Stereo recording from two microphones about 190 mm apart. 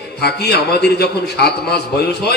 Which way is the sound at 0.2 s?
60° left (ahead or behind).